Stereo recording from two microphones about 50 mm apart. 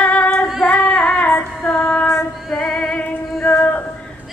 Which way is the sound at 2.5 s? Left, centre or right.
Centre.